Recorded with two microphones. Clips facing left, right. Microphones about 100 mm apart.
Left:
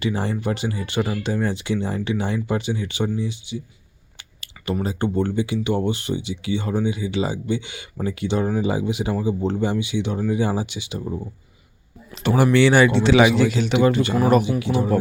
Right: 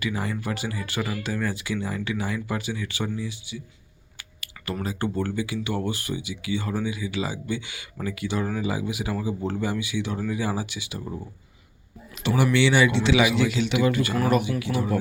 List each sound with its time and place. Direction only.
0.0 s speech: 30° left (ahead or behind)
12.3 s a man's voice: 40° left (ahead or behind)
13.8 s speech: 25° left (ahead or behind)